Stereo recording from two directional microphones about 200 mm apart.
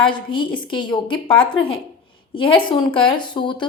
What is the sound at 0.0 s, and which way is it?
A woman's voice, 25° left (ahead or behind).